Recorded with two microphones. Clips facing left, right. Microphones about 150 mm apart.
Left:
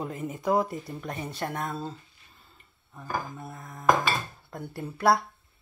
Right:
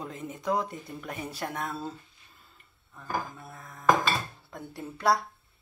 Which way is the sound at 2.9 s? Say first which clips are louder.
Even; 20° left (ahead or behind).